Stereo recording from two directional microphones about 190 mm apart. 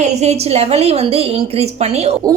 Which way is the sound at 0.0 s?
35° right (ahead or behind).